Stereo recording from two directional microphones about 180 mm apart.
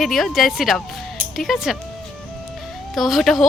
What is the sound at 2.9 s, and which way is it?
Speech, centre (ahead or behind).